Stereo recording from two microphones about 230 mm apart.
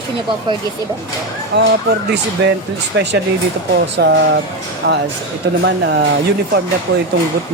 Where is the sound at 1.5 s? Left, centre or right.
Right.